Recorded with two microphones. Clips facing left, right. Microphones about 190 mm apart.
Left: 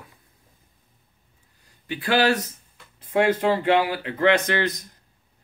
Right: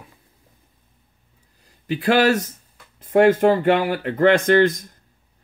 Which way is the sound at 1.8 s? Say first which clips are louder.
Right 4 dB; 40° right (ahead or behind).